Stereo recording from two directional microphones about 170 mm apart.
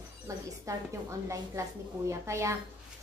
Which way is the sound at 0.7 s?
20° right (ahead or behind).